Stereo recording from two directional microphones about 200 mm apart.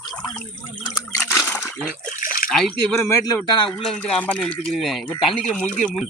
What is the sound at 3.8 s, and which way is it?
Speech, 5° left (ahead or behind).